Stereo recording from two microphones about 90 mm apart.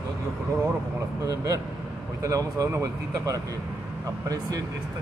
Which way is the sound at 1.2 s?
40° right (ahead or behind).